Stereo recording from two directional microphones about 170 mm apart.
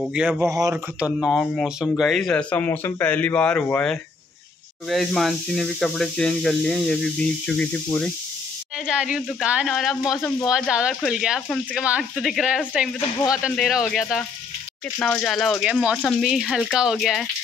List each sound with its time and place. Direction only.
0.1 s speech: 5° right (ahead or behind)
0.5 s speech: 20° right (ahead or behind)
0.9 s speech: 5° right (ahead or behind)
8.8 s speech: 5° right (ahead or behind)